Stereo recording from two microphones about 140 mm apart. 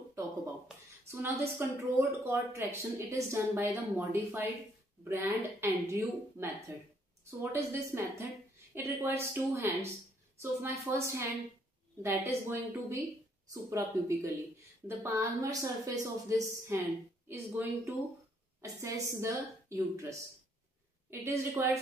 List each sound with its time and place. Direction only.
0.7 s speech: 5° right (ahead or behind)
1.1 s a woman's voice: 20° right (ahead or behind)